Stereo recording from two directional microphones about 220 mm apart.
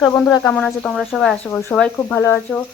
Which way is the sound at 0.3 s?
15° left (ahead or behind).